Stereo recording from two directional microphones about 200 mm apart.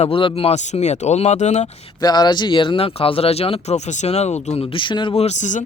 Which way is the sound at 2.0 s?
20° left (ahead or behind).